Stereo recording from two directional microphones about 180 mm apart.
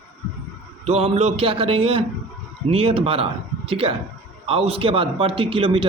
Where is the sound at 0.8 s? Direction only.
35° right (ahead or behind).